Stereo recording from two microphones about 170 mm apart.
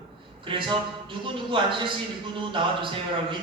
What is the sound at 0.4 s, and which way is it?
Speech, 30° right (ahead or behind).